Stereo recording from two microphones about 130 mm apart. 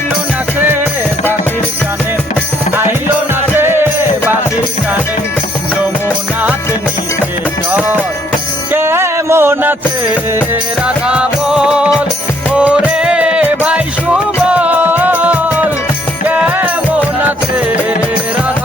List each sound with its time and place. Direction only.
3.5 s music: 15° right (ahead or behind)
8.7 s music: 20° right (ahead or behind)
10.8 s music: 10° right (ahead or behind)